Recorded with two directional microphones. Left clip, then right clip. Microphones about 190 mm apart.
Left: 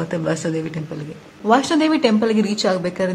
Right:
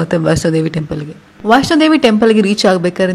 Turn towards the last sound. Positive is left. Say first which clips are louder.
# right 8 dB
turn(degrees=-30)  # may be behind; listen again after turning